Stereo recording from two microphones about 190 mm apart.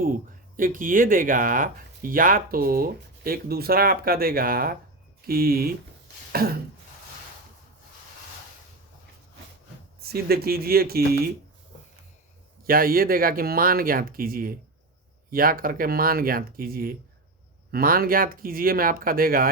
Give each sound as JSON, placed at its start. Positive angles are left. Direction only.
{"t": 0.0, "sound": "speech", "side_deg": -45}
{"t": 10.0, "sound": "speech", "side_deg": -55}
{"t": 12.6, "sound": "speech", "side_deg": -50}